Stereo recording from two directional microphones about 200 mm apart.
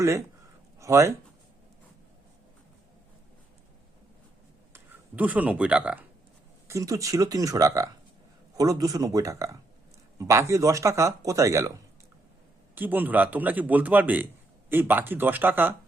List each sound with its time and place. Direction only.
0.8 s speech: 15° right (ahead or behind)
4.7 s speech: 10° right (ahead or behind)
12.7 s speech: 10° right (ahead or behind)